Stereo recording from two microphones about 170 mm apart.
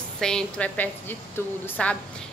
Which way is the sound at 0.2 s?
5° left (ahead or behind).